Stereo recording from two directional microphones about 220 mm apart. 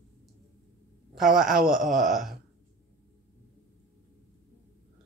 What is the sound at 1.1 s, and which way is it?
Speech, centre (ahead or behind).